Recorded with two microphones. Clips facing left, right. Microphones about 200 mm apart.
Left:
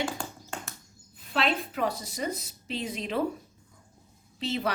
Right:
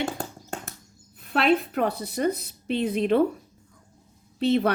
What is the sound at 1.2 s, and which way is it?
Speech, 55° right (ahead or behind).